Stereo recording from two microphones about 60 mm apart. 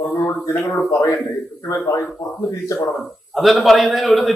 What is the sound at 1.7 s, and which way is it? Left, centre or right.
Speech, left.